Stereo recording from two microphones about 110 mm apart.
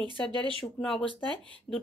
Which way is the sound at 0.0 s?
45° right (ahead or behind).